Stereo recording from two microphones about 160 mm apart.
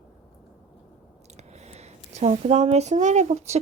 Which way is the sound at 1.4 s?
45° right (ahead or behind).